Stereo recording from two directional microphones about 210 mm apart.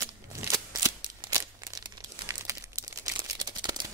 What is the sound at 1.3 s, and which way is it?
Crumpling, 15° right (ahead or behind).